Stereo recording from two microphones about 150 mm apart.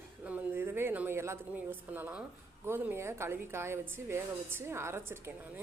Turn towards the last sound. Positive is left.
turn(degrees=-15)  # may be behind; listen again after turning